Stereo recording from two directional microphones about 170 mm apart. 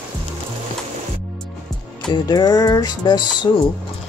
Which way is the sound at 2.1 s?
25° left (ahead or behind).